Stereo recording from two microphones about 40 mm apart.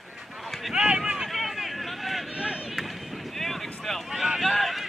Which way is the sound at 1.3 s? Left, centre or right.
Centre.